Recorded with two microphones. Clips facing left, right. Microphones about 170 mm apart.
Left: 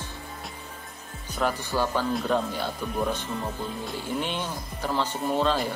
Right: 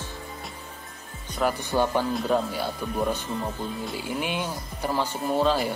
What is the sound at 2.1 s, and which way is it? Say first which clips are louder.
Speech: right 1 dB; 5° right (ahead or behind).